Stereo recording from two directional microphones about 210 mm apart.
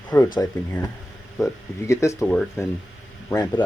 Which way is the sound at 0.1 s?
15° left (ahead or behind).